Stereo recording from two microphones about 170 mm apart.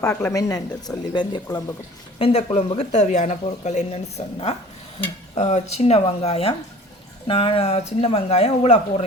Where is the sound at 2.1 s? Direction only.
35° left (ahead or behind).